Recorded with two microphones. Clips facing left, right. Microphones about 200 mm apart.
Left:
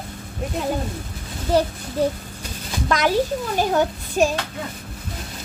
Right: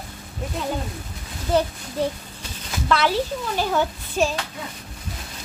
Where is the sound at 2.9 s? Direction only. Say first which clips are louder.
Left 2 dB; 45° left (ahead or behind).